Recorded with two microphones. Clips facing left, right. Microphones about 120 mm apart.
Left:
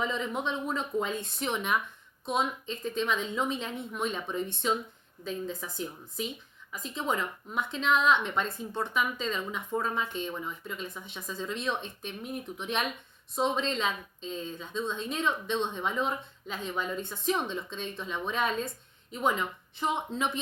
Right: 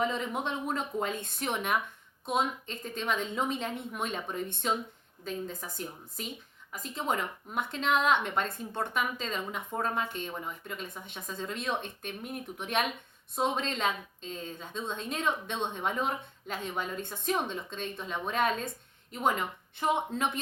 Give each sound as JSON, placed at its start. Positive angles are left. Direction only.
{"t": 0.0, "sound": "a woman's voice", "side_deg": -50}